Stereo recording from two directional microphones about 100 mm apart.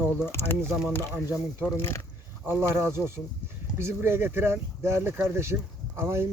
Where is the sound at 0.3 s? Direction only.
25° left (ahead or behind).